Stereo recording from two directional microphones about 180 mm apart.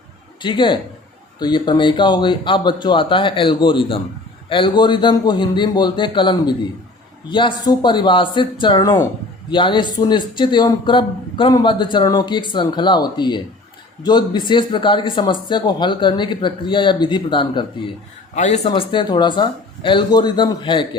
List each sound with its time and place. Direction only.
0.4 s a man's voice: 25° left (ahead or behind)
18.3 s a man's voice: 40° left (ahead or behind)
18.7 s a man's voice: 25° left (ahead or behind)